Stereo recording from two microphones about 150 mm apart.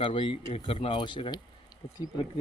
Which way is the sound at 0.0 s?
35° left (ahead or behind).